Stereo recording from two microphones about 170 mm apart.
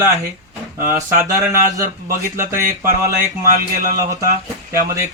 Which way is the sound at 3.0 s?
20° right (ahead or behind).